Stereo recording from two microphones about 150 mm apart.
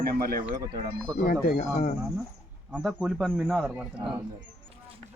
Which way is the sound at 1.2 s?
60° left (ahead or behind).